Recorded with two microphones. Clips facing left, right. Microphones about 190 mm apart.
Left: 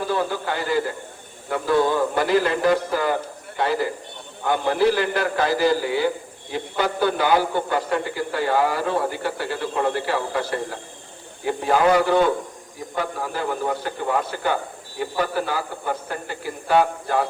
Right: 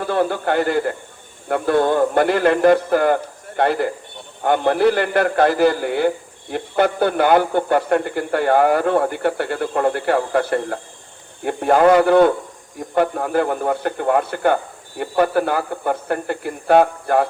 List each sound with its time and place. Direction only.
0.0 s a man's voice: 60° right (ahead or behind)